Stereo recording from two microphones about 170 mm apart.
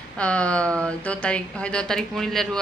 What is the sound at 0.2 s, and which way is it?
A woman's voice, 5° left (ahead or behind).